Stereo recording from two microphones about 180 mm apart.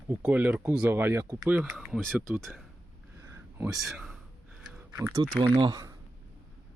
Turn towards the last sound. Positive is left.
turn(degrees=-20)  # may be behind; listen again after turning